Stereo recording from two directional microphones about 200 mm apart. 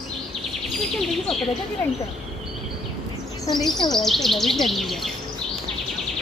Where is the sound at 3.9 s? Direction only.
Centre (ahead or behind).